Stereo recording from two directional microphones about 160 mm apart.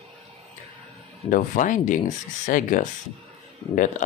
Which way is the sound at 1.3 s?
55° left (ahead or behind).